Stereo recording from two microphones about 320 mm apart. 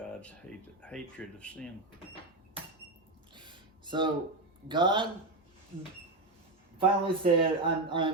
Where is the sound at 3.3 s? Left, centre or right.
Centre.